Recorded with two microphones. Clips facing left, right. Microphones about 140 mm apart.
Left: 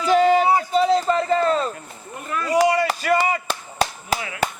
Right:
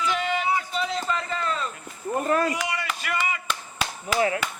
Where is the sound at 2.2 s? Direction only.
40° right (ahead or behind).